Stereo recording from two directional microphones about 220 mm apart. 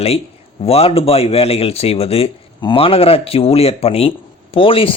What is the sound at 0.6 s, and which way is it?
A man's voice, 25° left (ahead or behind).